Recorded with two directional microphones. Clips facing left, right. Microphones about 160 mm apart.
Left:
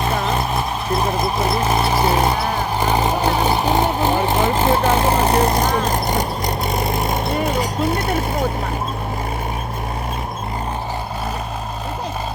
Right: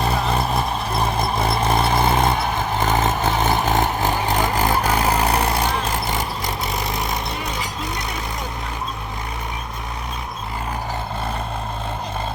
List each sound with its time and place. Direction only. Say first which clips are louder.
0.1 s vehicle: left 1 dB; 30° right (ahead or behind)
1.2 s vehicle: left 2 dB; centre (ahead or behind); by 6.2 s 45° left (ahead or behind)
6.4 s vehicle: left 4 dB; centre (ahead or behind)
7.3 s vehicle: left 8 dB; 50° left (ahead or behind)
7.9 s a sound: left 8 dB; 55° left (ahead or behind)